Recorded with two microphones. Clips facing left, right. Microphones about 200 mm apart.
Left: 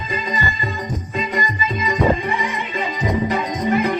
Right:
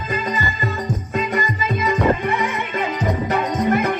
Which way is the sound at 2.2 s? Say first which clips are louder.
Right 2 dB; 55° right (ahead or behind).